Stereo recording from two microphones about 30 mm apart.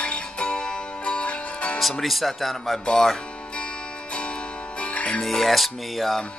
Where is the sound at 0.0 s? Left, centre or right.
Left.